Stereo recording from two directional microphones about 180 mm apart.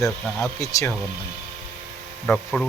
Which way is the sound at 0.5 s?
20° left (ahead or behind).